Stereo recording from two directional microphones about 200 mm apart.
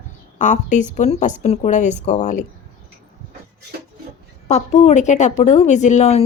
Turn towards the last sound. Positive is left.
turn(degrees=35)  # may be behind; listen again after turning